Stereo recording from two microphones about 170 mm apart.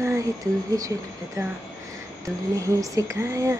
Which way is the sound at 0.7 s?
20° right (ahead or behind).